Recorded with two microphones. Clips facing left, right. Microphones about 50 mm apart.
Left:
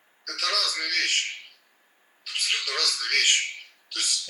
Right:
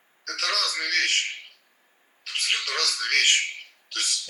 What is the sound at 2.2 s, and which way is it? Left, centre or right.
Television, right.